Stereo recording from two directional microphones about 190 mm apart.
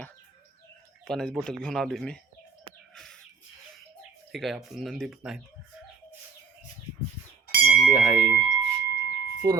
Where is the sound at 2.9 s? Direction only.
5° left (ahead or behind).